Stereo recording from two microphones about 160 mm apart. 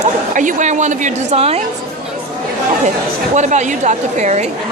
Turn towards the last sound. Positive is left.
turn(degrees=-45)  # may be behind; listen again after turning